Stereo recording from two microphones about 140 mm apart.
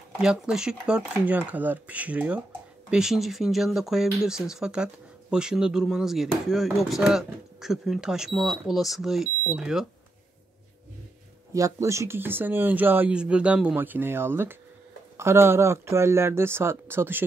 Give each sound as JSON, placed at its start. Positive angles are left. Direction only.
{"t": 0.2, "sound": "speech", "side_deg": -5}
{"t": 11.5, "sound": "speech", "side_deg": -20}